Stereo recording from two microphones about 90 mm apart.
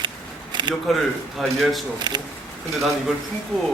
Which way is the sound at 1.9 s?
55° right (ahead or behind).